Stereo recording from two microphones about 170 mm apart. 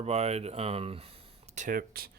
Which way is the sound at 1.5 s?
55° right (ahead or behind).